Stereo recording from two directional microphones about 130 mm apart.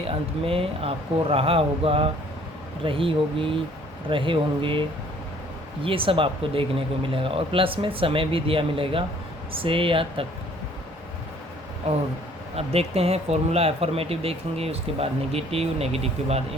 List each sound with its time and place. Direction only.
0.1 s speech: 45° right (ahead or behind)
5.8 s speech: 45° right (ahead or behind)
12.5 s speech: 50° right (ahead or behind)